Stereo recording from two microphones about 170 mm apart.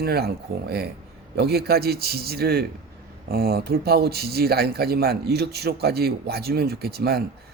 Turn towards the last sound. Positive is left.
turn(degrees=-65)  # may be behind; listen again after turning